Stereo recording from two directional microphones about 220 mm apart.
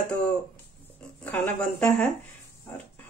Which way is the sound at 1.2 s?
5° left (ahead or behind).